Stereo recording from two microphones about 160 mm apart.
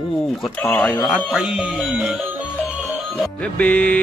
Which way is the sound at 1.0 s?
5° right (ahead or behind).